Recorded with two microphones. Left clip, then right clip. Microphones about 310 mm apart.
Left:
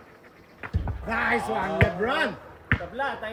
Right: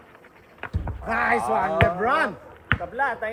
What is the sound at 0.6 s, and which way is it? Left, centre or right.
Speech, centre.